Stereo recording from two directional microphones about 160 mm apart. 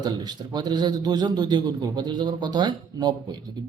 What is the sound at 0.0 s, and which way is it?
Speech, 25° right (ahead or behind).